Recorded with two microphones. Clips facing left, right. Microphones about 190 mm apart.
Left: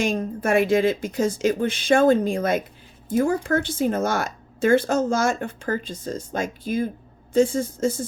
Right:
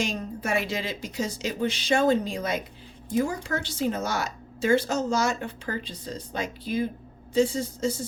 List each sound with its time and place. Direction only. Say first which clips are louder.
0.0 s a woman's voice: left 6 dB; 50° left (ahead or behind)